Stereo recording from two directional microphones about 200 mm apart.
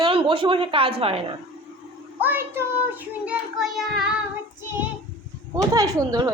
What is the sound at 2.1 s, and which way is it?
A child's voice, 10° right (ahead or behind).